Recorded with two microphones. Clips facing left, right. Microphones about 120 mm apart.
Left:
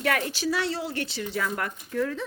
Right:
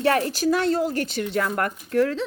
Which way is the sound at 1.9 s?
80° right.